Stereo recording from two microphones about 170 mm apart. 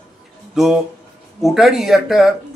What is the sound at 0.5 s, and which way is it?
Speech, centre (ahead or behind).